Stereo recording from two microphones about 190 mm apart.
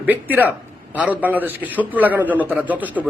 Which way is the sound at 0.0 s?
10° right (ahead or behind).